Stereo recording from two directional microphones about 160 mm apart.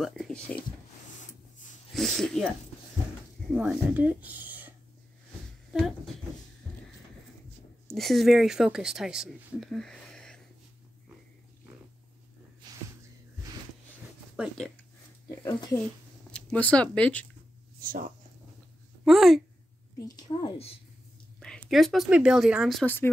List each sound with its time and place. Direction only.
0.0 s speech: centre (ahead or behind)
2.0 s speech: centre (ahead or behind)
3.5 s speech: 10° right (ahead or behind)
7.9 s speech: centre (ahead or behind)
14.3 s speech: 5° right (ahead or behind)
16.3 s speech: 5° left (ahead or behind)
17.7 s speech: 60° right (ahead or behind)
19.0 s speech: centre (ahead or behind)
20.2 s a woman's voice: 25° left (ahead or behind)
21.6 s speech: centre (ahead or behind)